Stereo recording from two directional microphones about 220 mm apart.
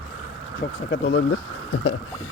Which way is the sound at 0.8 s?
55° left (ahead or behind).